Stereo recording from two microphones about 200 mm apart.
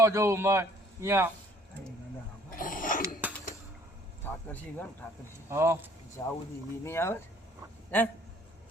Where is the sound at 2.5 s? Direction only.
45° left (ahead or behind).